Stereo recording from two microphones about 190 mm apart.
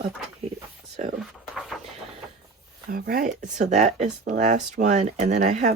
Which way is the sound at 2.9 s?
50° right (ahead or behind).